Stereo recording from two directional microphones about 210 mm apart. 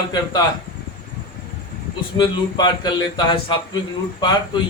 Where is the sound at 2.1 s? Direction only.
20° left (ahead or behind).